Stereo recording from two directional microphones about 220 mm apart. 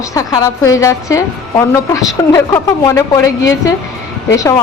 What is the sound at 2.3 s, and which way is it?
A woman's voice, 15° left (ahead or behind).